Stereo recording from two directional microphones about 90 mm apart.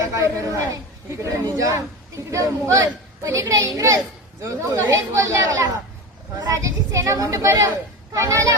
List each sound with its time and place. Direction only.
0.0 s a woman's voice: 35° right (ahead or behind)